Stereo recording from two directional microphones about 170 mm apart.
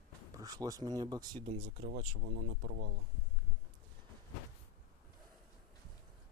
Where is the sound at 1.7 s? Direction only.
50° right (ahead or behind).